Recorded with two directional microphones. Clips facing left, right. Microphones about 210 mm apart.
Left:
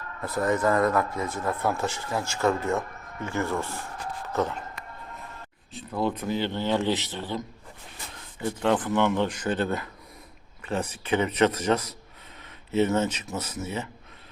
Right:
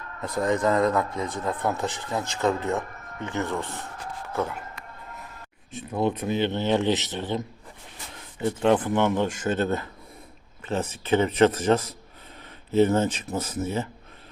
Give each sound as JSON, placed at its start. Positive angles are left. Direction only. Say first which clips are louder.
{"t": 0.4, "sound": "speech", "louder": "right 1 dB", "side_deg": -20}
{"t": 3.4, "sound": "speech", "louder": "left 1 dB", "side_deg": 10}
{"t": 4.3, "sound": "a man's voice", "louder": "left 1 dB", "side_deg": -10}
{"t": 5.7, "sound": "a man's voice", "louder": "right 2 dB", "side_deg": -20}
{"t": 12.4, "sound": "a sound", "louder": "right 4 dB", "side_deg": -35}
{"t": 13.3, "sound": "speech", "louder": "right 4 dB", "side_deg": -60}